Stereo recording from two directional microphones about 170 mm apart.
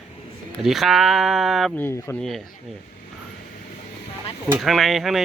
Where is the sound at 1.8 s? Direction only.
15° left (ahead or behind).